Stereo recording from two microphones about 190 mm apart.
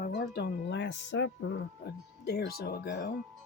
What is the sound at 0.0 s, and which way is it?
Speech, 55° left (ahead or behind).